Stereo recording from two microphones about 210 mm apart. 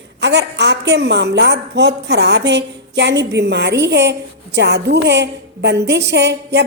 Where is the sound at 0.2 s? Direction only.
55° right (ahead or behind).